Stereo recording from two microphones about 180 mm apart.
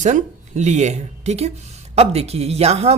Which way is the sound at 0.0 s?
40° right (ahead or behind).